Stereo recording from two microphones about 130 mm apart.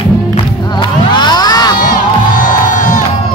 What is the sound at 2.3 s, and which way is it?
Music, 90° left.